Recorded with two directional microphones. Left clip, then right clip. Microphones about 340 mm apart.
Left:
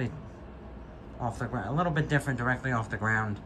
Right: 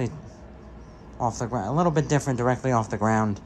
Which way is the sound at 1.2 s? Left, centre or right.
Centre.